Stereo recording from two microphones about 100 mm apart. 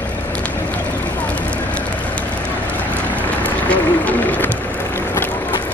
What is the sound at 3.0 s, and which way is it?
Vehicle, 15° left (ahead or behind).